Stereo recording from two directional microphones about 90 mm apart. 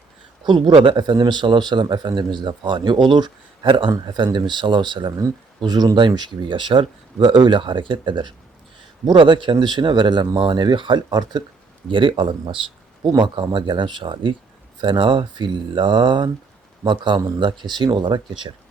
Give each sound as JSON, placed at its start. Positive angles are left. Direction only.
{"t": 0.4, "sound": "speech", "side_deg": -60}
{"t": 0.9, "sound": "speech", "side_deg": -50}
{"t": 11.9, "sound": "speech", "side_deg": -70}
{"t": 13.1, "sound": "speech", "side_deg": -55}